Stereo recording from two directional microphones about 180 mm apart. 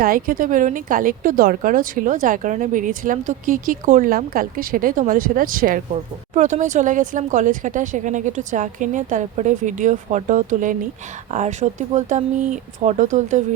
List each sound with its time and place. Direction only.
0.0 s a woman's voice: 50° right (ahead or behind)